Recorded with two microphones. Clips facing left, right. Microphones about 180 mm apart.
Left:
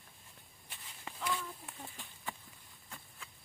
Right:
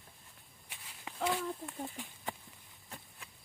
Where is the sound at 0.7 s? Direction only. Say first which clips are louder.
Even; 10° right (ahead or behind).